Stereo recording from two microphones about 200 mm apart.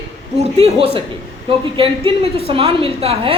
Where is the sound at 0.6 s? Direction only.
30° right (ahead or behind).